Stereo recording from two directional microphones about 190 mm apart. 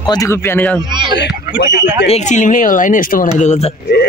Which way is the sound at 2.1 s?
40° left (ahead or behind).